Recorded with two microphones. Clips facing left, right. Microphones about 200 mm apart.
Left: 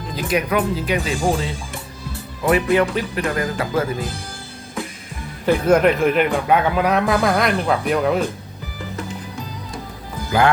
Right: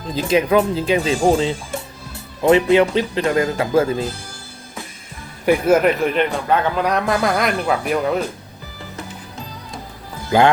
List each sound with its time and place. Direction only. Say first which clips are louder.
0.2 s speech: right 4 dB; 25° right (ahead or behind)
5.5 s a man's voice: even; 5° right (ahead or behind)
10.3 s speech: right 3 dB; 30° right (ahead or behind)